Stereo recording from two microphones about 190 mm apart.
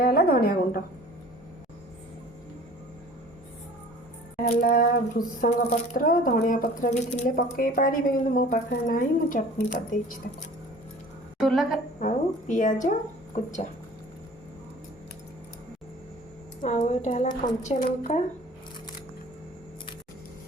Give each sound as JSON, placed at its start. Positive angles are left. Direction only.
{"t": 0.0, "sound": "a woman's voice", "side_deg": 50}
{"t": 4.6, "sound": "a woman's voice", "side_deg": 50}
{"t": 11.3, "sound": "a sound", "side_deg": 0}
{"t": 11.9, "sound": "a woman's voice", "side_deg": 40}
{"t": 16.6, "sound": "a woman's voice", "side_deg": 40}